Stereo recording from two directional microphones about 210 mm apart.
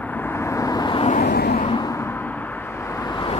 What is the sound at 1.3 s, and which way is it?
Vehicle, 50° left (ahead or behind).